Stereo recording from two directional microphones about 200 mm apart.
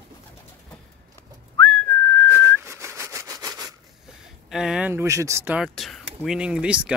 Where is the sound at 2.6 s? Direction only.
15° right (ahead or behind).